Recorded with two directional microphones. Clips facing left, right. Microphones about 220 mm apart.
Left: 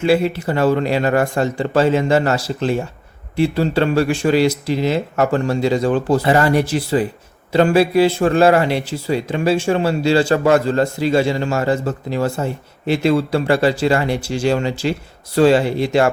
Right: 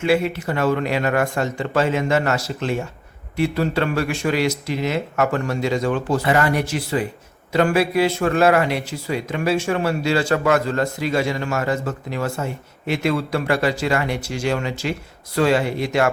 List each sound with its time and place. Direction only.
0.0 s a man's voice: 30° left (ahead or behind)